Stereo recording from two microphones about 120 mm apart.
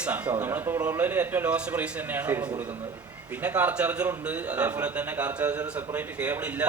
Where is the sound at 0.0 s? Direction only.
10° right (ahead or behind).